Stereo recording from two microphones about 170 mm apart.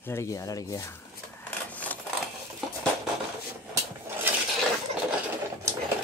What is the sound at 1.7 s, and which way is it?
Sewing machine, 10° left (ahead or behind).